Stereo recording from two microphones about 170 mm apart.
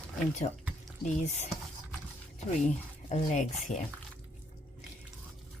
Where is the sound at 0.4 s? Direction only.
35° left (ahead or behind).